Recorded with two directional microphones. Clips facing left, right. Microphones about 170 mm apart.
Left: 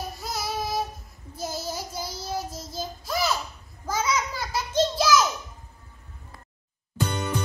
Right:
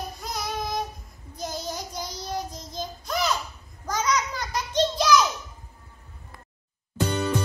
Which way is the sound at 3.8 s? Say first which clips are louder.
Right 1 dB; 5° left (ahead or behind).